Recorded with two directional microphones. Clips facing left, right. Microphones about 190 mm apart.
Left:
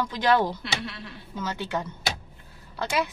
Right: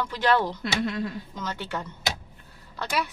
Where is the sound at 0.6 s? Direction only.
45° right (ahead or behind).